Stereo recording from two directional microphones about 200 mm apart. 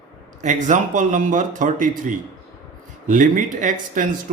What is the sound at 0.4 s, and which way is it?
Speech, 40° right (ahead or behind).